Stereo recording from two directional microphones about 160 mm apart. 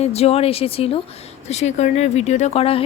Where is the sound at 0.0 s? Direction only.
40° left (ahead or behind).